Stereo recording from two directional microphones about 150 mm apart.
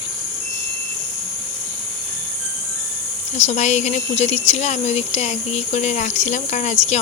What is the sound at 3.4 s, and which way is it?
Speech, 50° left (ahead or behind).